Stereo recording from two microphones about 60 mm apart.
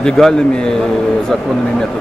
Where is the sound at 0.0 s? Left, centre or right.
Centre.